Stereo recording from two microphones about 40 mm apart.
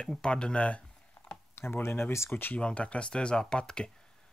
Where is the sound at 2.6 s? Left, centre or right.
Left.